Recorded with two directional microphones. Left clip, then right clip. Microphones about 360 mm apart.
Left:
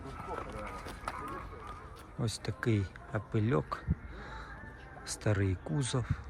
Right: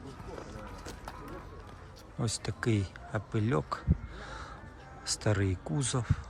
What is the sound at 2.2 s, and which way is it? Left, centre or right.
Speech, centre.